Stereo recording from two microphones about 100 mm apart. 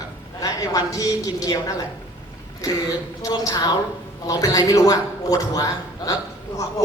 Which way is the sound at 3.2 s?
35° left (ahead or behind).